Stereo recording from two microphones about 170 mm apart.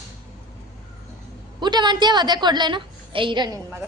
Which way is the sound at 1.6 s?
25° right (ahead or behind).